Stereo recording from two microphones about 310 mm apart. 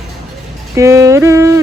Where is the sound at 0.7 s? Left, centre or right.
Centre.